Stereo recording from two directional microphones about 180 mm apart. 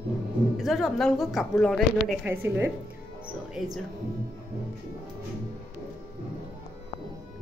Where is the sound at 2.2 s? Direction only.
10° right (ahead or behind).